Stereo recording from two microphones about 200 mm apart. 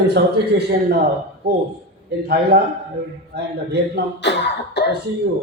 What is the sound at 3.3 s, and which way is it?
Speech, 55° right (ahead or behind).